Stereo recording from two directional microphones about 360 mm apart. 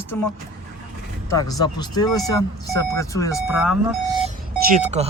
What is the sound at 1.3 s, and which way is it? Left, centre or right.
Speech, centre.